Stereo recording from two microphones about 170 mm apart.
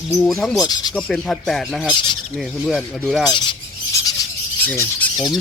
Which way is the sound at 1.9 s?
25° left (ahead or behind).